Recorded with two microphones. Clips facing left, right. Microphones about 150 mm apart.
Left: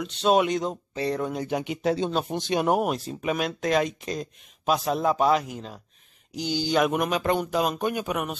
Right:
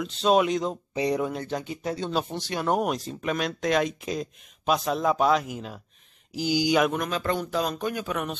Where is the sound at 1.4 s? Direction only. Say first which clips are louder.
Left 5 dB; 15° left (ahead or behind).